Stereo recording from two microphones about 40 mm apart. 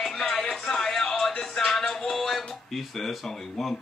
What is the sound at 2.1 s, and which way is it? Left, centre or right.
Speech, centre.